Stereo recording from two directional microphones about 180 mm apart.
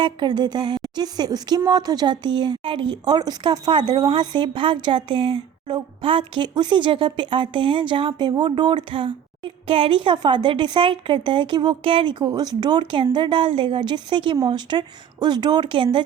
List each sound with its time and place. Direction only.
0.0 s speech: 25° right (ahead or behind)